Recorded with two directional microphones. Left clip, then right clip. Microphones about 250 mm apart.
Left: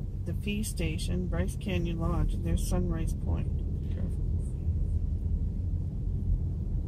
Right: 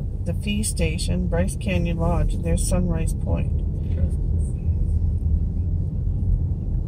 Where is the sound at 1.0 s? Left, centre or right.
Right.